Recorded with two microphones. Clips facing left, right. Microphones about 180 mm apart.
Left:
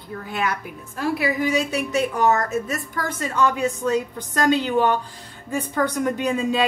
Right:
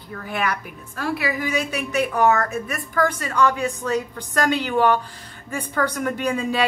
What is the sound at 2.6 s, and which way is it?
A woman's voice, 25° left (ahead or behind).